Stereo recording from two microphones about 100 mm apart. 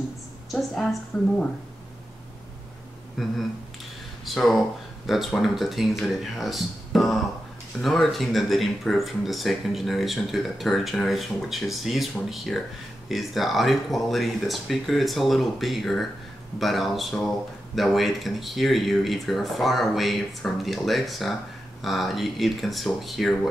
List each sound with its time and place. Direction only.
0.5 s speech: centre (ahead or behind)
3.2 s speech: centre (ahead or behind)